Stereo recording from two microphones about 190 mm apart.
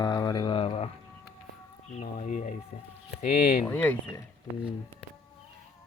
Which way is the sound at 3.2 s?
50° left (ahead or behind).